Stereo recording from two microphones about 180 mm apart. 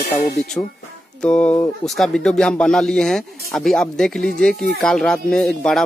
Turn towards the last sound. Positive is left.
turn(degrees=5)  # may be behind; listen again after turning